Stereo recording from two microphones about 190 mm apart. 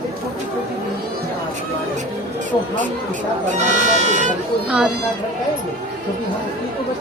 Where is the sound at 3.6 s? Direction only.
40° right (ahead or behind).